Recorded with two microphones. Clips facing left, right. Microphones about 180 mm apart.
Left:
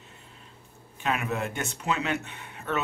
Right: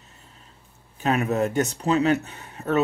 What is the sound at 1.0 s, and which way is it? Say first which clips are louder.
Speech: right 7 dB; 40° right (ahead or behind).